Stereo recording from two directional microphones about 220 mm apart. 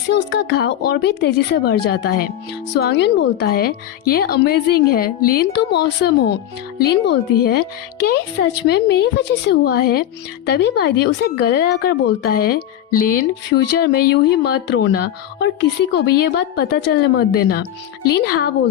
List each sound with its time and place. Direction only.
0.1 s a woman's voice: 50° left (ahead or behind)
8.6 s a woman's voice: 50° left (ahead or behind)